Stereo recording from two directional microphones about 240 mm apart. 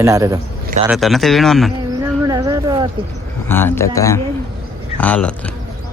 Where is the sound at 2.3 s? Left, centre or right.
Centre.